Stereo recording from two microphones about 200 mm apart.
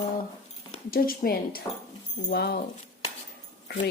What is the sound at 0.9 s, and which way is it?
Speech, 45° left (ahead or behind).